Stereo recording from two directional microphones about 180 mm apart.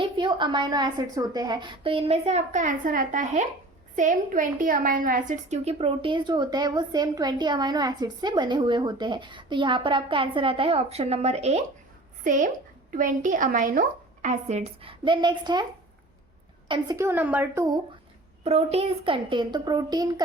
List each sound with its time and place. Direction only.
0.0 s a woman's voice: 25° right (ahead or behind)
16.6 s a woman's voice: 25° right (ahead or behind)
17.0 s a woman's voice: 10° right (ahead or behind)
18.4 s a woman's voice: 35° right (ahead or behind)